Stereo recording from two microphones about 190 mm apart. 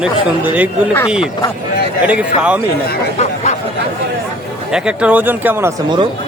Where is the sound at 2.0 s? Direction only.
5° right (ahead or behind).